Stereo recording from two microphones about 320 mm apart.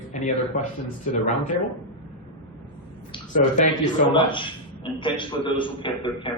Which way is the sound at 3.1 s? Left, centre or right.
Left.